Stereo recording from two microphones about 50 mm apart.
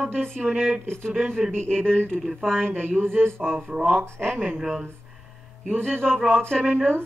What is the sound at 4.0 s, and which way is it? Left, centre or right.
Speech, right.